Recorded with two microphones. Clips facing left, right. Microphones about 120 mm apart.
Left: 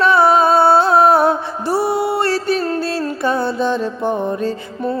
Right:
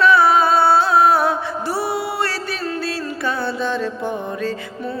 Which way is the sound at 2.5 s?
45° left (ahead or behind).